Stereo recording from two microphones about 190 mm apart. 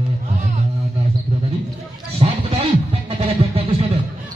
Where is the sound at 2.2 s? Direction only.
30° right (ahead or behind).